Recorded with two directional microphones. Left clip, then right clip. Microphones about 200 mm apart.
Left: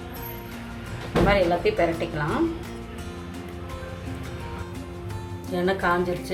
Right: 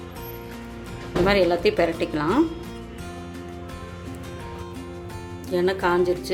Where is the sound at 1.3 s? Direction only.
55° right (ahead or behind).